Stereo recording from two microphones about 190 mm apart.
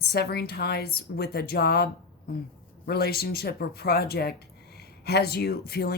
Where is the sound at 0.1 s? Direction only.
55° left (ahead or behind).